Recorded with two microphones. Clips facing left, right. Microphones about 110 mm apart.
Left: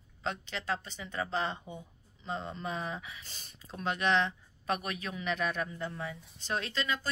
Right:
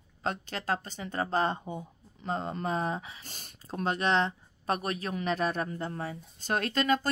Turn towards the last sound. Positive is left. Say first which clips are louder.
# right 7 dB
turn(degrees=-50)  # may be behind; listen again after turning